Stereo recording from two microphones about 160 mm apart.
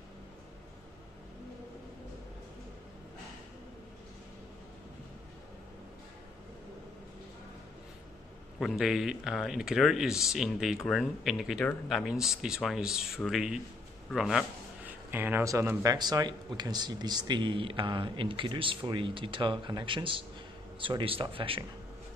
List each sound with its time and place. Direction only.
8.5 s speech: centre (ahead or behind); by 21.6 s 35° right (ahead or behind)